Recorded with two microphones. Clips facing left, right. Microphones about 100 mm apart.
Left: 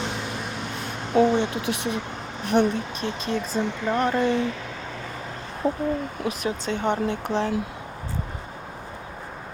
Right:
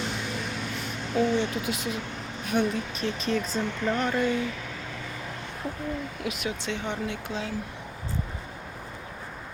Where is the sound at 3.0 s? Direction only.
30° left (ahead or behind).